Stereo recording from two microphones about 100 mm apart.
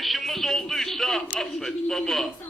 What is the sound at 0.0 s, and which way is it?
A man's voice, centre (ahead or behind).